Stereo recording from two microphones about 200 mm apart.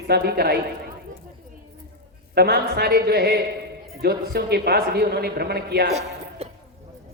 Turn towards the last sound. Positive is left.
turn(degrees=-30)  # may be behind; listen again after turning